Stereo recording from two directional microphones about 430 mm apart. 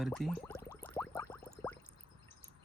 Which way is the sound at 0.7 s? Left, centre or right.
Centre.